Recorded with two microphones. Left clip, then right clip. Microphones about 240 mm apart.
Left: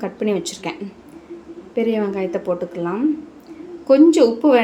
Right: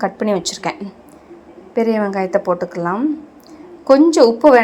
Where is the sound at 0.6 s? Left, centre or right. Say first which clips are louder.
Right 5 dB; centre.